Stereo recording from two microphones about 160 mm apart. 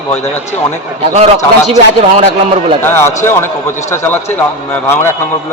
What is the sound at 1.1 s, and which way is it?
A man's voice, 45° right (ahead or behind).